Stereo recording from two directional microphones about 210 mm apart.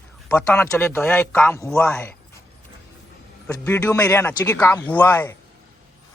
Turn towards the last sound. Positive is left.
turn(degrees=10)  # may be behind; listen again after turning